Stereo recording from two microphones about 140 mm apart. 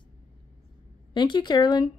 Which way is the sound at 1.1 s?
35° left (ahead or behind).